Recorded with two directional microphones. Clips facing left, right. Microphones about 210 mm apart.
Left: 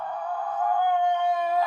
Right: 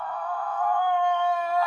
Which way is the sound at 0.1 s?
20° left (ahead or behind).